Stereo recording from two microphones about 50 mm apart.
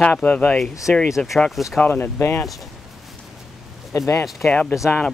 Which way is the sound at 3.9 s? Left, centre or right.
Left.